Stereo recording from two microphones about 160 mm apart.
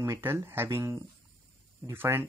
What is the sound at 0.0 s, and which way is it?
Speech, 15° right (ahead or behind).